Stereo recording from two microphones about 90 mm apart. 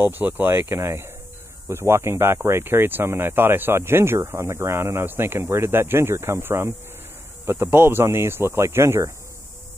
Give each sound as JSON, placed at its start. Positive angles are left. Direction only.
{"t": 0.0, "sound": "speech", "side_deg": -20}